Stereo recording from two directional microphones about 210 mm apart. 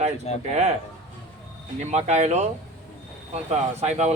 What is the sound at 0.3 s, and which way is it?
Speech, 30° left (ahead or behind).